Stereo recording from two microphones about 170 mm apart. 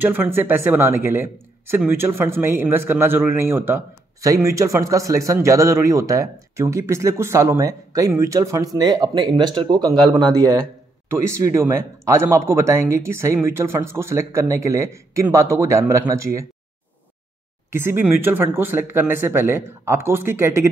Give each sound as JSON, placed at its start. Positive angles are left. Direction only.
{"t": 0.0, "sound": "a man's voice", "side_deg": -10}
{"t": 17.6, "sound": "speech", "side_deg": -15}